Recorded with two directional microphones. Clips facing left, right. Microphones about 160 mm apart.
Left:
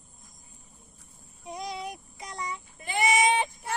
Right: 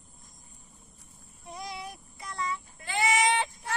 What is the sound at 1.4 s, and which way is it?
Child singing, 15° left (ahead or behind).